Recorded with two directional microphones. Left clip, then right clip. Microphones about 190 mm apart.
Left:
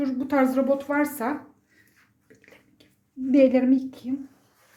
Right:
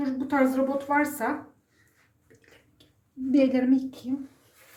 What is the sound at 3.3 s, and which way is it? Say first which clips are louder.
Speech: left 4 dB; 25° left (ahead or behind).